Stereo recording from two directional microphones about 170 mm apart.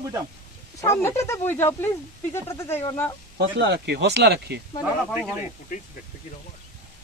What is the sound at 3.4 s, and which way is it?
Speech, 90° right.